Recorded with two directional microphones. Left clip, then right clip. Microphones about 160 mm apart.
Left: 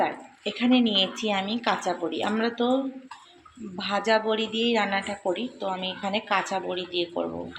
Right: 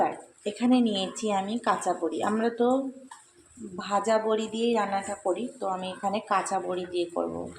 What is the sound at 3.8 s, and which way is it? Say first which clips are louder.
A woman's voice: left 1 dB; 5° right (ahead or behind).